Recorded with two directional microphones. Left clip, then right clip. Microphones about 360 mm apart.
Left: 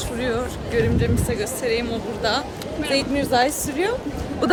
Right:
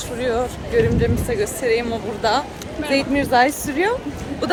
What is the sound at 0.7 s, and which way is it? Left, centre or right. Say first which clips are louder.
Speech: right 3 dB; centre.